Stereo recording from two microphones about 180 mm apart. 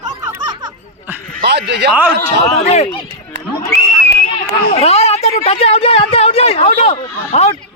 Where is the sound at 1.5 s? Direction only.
70° right (ahead or behind).